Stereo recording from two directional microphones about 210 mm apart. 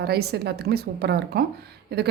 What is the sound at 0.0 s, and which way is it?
A woman's voice, 50° right (ahead or behind).